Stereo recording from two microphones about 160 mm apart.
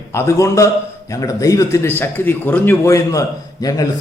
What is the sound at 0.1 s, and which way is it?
A man's voice, 15° left (ahead or behind).